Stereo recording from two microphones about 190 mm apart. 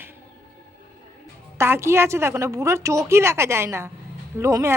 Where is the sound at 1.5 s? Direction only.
15° right (ahead or behind).